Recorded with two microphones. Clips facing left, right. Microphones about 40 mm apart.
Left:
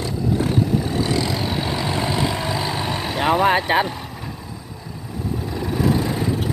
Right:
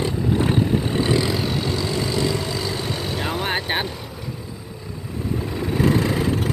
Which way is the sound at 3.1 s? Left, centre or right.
Left.